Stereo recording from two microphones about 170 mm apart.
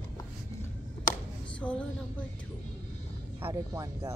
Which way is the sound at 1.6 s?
5° left (ahead or behind).